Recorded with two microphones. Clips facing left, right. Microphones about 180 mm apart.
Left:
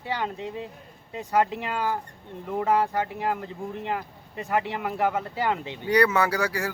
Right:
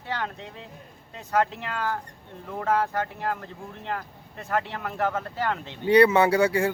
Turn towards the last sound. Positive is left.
turn(degrees=-25)  # may be behind; listen again after turning